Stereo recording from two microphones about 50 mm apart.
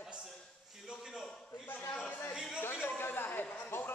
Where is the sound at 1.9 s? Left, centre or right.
Left.